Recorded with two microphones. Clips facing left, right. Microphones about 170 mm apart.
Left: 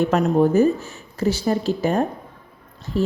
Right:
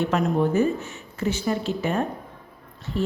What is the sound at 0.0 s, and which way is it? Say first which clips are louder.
A woman's voice: left 5 dB; 40° left (ahead or behind).